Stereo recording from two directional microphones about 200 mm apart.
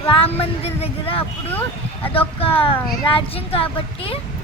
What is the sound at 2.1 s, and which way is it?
A child's voice, 30° left (ahead or behind).